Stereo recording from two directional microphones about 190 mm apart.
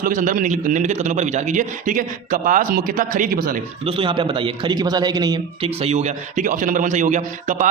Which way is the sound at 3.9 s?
25° right (ahead or behind).